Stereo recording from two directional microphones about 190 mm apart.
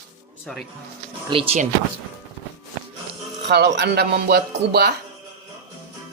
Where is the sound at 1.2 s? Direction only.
30° right (ahead or behind).